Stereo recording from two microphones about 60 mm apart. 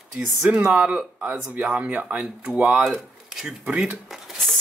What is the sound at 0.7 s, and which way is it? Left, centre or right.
Speech, centre.